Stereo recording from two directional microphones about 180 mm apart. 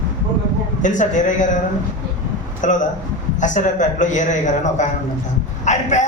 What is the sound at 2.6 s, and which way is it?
A man's voice, 45° left (ahead or behind).